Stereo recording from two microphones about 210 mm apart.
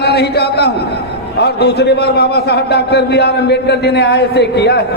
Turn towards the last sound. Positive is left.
turn(degrees=50)  # may be behind; listen again after turning